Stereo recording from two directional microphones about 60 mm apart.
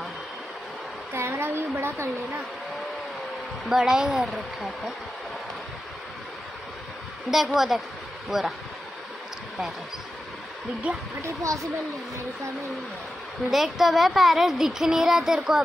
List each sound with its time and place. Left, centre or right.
1.1 s a woman's voice: right
3.6 s speech: centre
7.2 s speech: centre
10.9 s speech: right
11.2 s speech: right
13.5 s speech: centre